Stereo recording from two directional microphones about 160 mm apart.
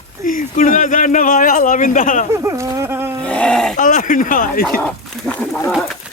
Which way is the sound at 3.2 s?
5° left (ahead or behind).